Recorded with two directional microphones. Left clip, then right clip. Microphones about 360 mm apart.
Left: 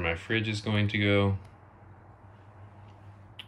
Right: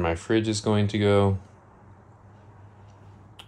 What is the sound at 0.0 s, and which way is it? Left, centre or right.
Speech, centre.